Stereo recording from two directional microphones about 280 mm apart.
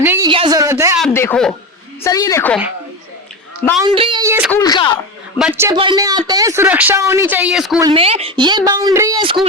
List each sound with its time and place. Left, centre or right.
0.0 s a sound: centre
0.3 s speech: centre
1.0 s a sound: centre
2.0 s a woman's voice: centre
3.8 s a man's voice: centre
4.5 s a woman's voice: centre
5.4 s a man's voice: centre
7.8 s a man's voice: centre